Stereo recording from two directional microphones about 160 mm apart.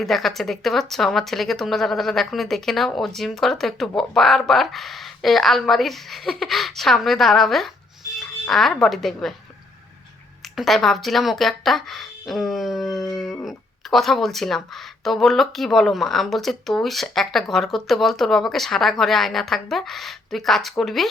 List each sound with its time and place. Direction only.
0.0 s speech: centre (ahead or behind)
10.5 s speech: centre (ahead or behind)